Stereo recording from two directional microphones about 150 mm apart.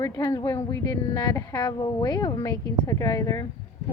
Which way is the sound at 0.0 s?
25° left (ahead or behind).